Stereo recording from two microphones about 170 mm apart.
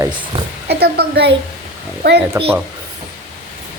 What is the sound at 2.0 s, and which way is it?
Speech, 70° right (ahead or behind).